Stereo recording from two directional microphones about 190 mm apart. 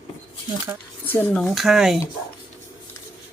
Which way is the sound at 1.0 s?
10° left (ahead or behind).